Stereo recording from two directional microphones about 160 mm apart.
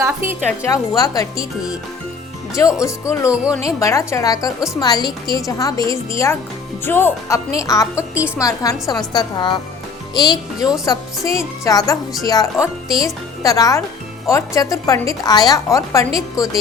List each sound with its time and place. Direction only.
0.0 s a woman's voice: 15° right (ahead or behind)
0.6 s a woman's voice: 20° left (ahead or behind)
2.8 s a woman's voice: 20° left (ahead or behind)
3.2 s speech: 5° right (ahead or behind)
3.6 s a woman's voice: 20° left (ahead or behind)